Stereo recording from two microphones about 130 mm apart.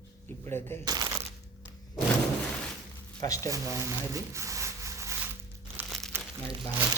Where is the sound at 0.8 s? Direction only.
30° right (ahead or behind).